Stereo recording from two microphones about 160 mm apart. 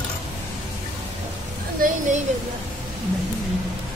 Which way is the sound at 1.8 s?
60° right (ahead or behind).